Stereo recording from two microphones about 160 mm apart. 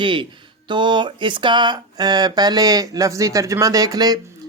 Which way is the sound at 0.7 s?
30° right (ahead or behind).